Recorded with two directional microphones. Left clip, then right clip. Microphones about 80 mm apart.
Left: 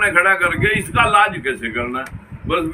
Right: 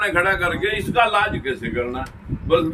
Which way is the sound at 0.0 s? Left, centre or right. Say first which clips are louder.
Left 5 dB; right.